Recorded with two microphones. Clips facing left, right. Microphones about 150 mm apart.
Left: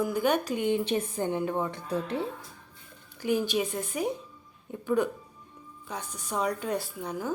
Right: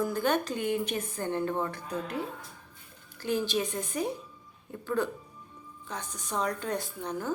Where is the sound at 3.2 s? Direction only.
15° left (ahead or behind).